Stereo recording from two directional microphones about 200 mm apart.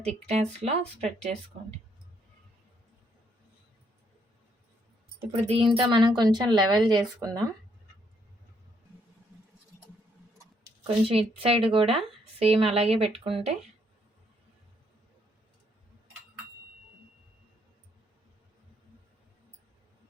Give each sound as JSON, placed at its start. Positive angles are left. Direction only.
{"t": 0.3, "sound": "speech", "side_deg": -30}
{"t": 5.3, "sound": "speech", "side_deg": -25}
{"t": 10.8, "sound": "speech", "side_deg": -30}